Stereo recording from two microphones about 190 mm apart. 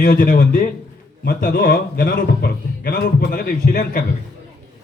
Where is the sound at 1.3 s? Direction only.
60° left (ahead or behind).